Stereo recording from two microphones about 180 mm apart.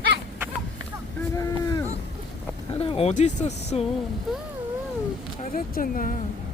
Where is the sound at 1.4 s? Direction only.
20° left (ahead or behind).